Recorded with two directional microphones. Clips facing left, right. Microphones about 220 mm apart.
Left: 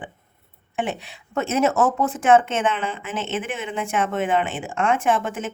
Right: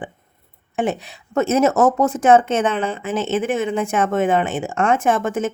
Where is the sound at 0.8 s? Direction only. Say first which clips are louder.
Right 5 dB; 40° right (ahead or behind).